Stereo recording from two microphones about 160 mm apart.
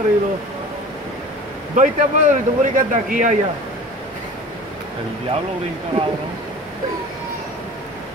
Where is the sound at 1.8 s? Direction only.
50° right (ahead or behind).